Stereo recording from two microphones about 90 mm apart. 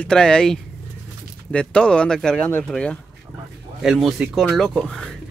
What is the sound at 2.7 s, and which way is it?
Speech, 10° left (ahead or behind).